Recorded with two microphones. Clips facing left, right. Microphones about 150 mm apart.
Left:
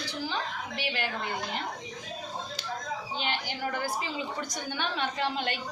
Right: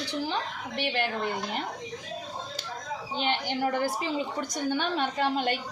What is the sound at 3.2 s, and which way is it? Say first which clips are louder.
A woman's voice: right 7 dB; 55° right (ahead or behind).